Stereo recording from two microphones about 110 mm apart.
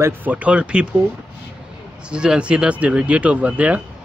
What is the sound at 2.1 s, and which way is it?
Speech, 10° right (ahead or behind).